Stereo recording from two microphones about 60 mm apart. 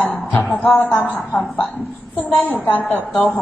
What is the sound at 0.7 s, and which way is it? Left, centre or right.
Speech, left.